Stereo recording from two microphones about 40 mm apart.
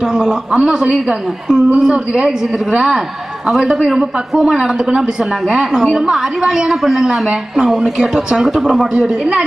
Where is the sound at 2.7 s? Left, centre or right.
Right.